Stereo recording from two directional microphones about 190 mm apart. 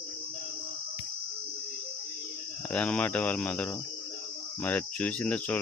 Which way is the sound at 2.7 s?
5° left (ahead or behind).